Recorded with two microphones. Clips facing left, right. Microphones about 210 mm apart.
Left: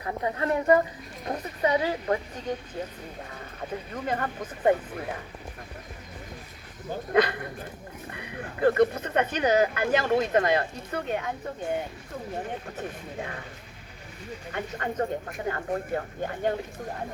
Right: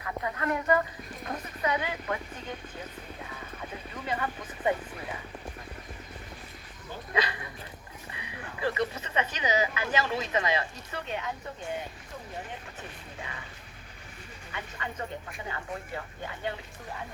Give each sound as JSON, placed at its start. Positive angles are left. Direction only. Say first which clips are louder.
{"t": 0.0, "sound": "a sound", "louder": "left 4 dB", "side_deg": 30}
{"t": 1.3, "sound": "speech", "louder": "left 6 dB", "side_deg": 35}
{"t": 3.9, "sound": "speech", "louder": "left 3 dB", "side_deg": 50}
{"t": 7.1, "sound": "speech", "louder": "left 8 dB", "side_deg": 55}
{"t": 13.1, "sound": "speech", "louder": "left 5 dB", "side_deg": 55}
{"t": 14.5, "sound": "speech", "louder": "left 8 dB", "side_deg": 50}